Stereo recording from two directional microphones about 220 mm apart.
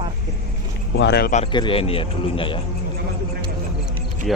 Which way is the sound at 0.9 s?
50° left (ahead or behind).